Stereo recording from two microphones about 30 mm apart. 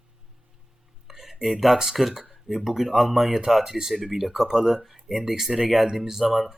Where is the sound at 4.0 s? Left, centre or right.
Centre.